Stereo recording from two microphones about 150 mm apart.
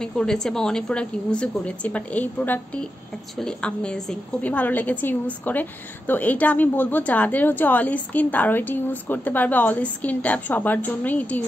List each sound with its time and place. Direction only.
0.0 s a woman's voice: 5° left (ahead or behind)